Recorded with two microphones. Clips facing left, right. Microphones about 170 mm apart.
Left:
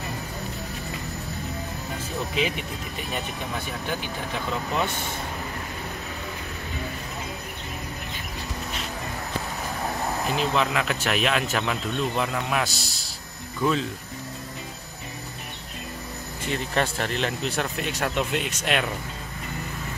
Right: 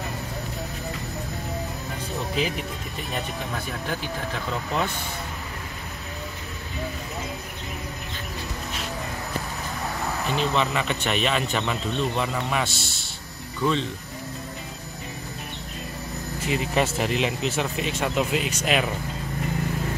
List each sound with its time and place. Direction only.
10.2 s speech: 5° left (ahead or behind)
12.7 s a man's voice: 40° left (ahead or behind)
13.6 s speech: 5° left (ahead or behind)
16.4 s speech: 5° right (ahead or behind)